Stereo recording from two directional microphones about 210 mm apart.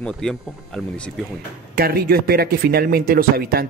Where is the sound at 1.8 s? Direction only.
45° right (ahead or behind).